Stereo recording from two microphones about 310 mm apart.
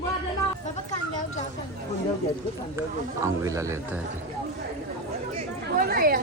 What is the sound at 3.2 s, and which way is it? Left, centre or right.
Speech, centre.